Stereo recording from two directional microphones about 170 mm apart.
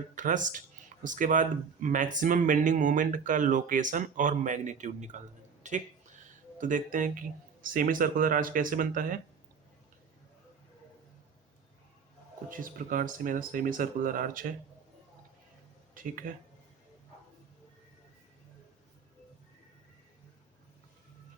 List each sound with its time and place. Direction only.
0.2 s speech: 50° right (ahead or behind)
12.5 s speech: 55° right (ahead or behind)
16.0 s speech: 55° right (ahead or behind)